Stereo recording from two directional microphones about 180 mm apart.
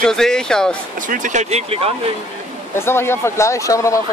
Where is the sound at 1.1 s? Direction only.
45° right (ahead or behind).